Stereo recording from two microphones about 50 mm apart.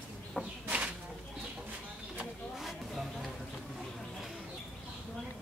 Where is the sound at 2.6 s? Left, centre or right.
Centre.